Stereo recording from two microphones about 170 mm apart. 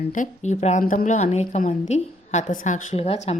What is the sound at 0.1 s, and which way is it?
A woman's voice, 45° left (ahead or behind).